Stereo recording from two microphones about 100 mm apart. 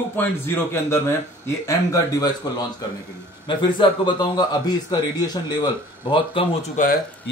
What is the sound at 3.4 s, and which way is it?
A man's voice, 50° left (ahead or behind).